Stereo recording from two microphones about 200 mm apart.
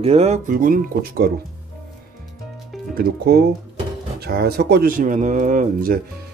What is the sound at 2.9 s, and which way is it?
Speech, 50° right (ahead or behind).